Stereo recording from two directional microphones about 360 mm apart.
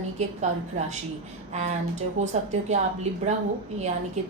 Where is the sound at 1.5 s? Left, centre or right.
Centre.